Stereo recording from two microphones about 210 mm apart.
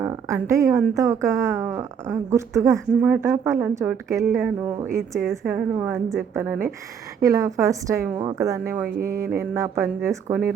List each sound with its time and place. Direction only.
0.0 s a woman's voice: 15° right (ahead or behind)
4.3 s a woman's voice: 5° right (ahead or behind)
9.0 s mantra: 45° right (ahead or behind)
9.4 s a woman's voice: 15° right (ahead or behind)